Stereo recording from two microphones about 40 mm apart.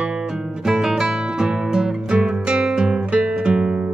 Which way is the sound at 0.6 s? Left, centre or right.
Centre.